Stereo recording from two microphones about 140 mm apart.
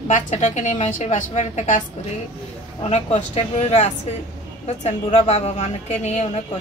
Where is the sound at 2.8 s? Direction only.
50° left (ahead or behind).